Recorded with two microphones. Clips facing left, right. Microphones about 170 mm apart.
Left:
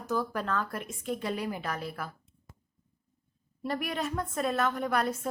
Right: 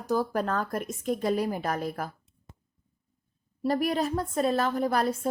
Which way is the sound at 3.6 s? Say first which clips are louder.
Right 6 dB; 35° right (ahead or behind).